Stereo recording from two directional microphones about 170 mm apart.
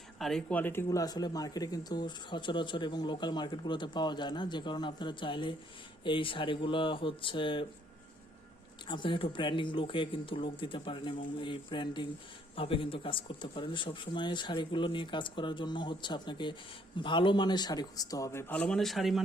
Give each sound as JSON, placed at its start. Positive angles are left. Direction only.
{"t": 0.2, "sound": "speech", "side_deg": 5}
{"t": 8.9, "sound": "speech", "side_deg": 30}